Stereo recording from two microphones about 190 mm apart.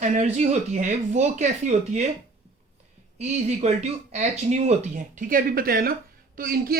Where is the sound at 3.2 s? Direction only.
35° right (ahead or behind).